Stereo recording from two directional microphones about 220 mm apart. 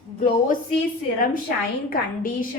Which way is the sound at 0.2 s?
35° left (ahead or behind).